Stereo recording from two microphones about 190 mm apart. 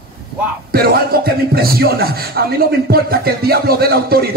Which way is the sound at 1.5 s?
55° right (ahead or behind).